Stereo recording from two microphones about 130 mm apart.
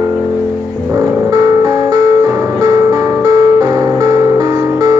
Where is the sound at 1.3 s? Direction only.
30° right (ahead or behind).